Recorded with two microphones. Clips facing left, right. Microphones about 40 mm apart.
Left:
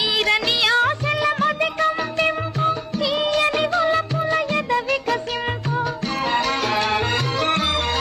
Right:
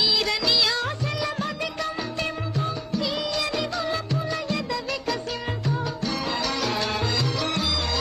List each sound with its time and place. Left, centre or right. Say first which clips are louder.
0.0 s music: left 4 dB; left